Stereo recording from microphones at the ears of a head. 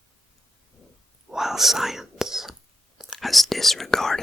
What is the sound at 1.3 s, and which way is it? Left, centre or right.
Whispering, centre.